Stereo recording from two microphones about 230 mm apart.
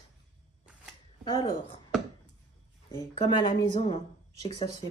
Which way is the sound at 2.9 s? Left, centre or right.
Left.